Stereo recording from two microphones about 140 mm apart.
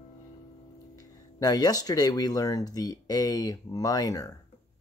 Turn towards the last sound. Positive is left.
turn(degrees=25)  # may be behind; listen again after turning